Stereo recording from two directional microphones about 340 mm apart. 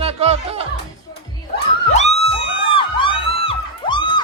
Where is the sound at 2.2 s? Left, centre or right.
Centre.